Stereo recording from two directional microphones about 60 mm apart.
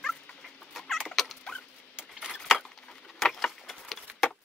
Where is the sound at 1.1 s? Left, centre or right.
Centre.